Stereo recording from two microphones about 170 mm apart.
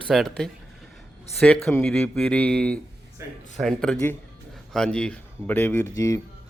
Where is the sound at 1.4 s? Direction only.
5° left (ahead or behind).